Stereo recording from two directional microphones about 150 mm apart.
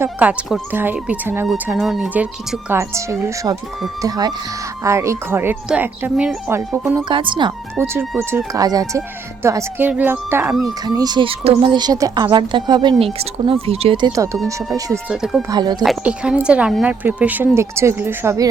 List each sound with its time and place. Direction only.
0.0 s a woman's voice: 10° right (ahead or behind)
1.6 s a woman's voice: 5° right (ahead or behind); by 3.6 s 20° right (ahead or behind)
4.8 s a woman's voice: 20° right (ahead or behind)
7.1 s speech: 35° right (ahead or behind)
7.8 s a woman's voice: 15° right (ahead or behind)
10.8 s speech: 25° right (ahead or behind)
15.1 s speech: 5° right (ahead or behind)
15.4 s speech: 30° right (ahead or behind)
15.8 s a woman's voice: 5° right (ahead or behind)